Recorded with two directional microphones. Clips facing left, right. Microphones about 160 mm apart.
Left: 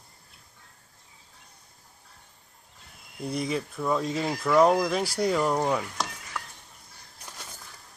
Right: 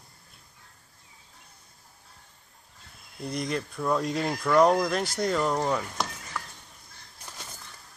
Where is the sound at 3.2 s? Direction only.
5° left (ahead or behind).